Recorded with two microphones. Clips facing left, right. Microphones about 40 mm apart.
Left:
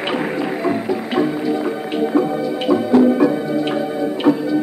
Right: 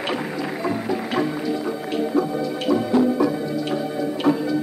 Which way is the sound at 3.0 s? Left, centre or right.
Left.